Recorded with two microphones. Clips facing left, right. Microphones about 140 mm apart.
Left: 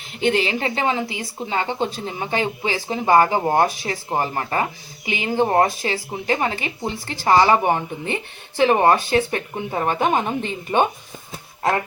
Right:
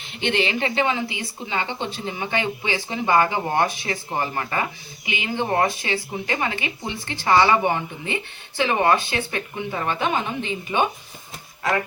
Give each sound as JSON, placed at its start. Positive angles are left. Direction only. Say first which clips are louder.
{"t": 0.2, "sound": "speech", "louder": "left 3 dB", "side_deg": 35}